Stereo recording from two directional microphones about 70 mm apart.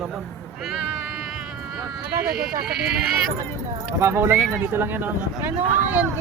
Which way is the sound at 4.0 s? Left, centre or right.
Right.